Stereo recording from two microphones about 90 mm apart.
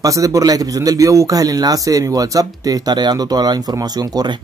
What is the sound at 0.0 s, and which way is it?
A man's voice, 40° right (ahead or behind).